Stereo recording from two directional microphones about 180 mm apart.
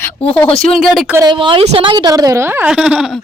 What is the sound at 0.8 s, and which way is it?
Speech, centre (ahead or behind).